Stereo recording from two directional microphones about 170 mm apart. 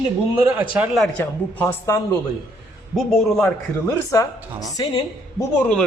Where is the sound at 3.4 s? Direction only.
20° left (ahead or behind).